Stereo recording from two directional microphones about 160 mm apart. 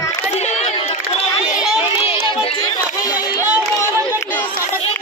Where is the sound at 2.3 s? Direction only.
30° left (ahead or behind).